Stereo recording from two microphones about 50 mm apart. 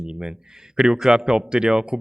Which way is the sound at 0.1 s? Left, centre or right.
Centre.